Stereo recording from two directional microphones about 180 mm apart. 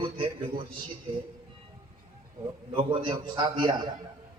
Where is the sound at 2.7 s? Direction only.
25° right (ahead or behind).